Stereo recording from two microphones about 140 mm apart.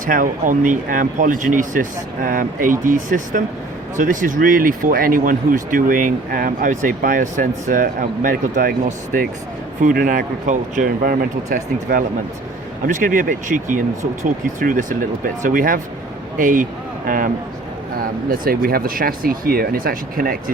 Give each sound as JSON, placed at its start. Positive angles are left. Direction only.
{"t": 0.0, "sound": "a man's voice", "side_deg": -70}
{"t": 12.8, "sound": "a man's voice", "side_deg": -70}
{"t": 18.3, "sound": "speech", "side_deg": -90}